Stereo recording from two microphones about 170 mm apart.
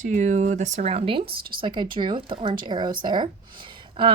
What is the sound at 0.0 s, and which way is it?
Speech, 45° right (ahead or behind).